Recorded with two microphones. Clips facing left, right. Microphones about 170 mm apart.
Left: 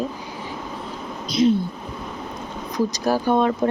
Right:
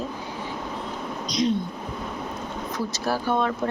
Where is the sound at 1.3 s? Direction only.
5° left (ahead or behind).